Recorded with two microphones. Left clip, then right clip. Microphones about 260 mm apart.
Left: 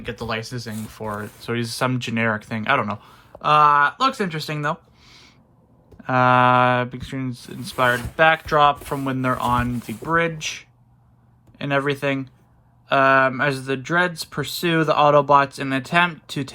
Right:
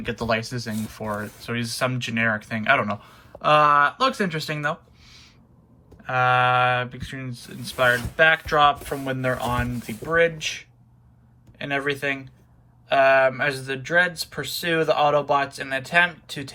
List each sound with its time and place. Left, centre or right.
0.0 s speech: centre; by 16.5 s left